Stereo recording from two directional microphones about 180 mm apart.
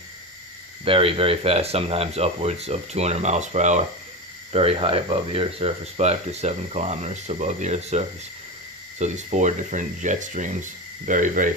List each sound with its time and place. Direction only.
0.9 s speech: 30° right (ahead or behind)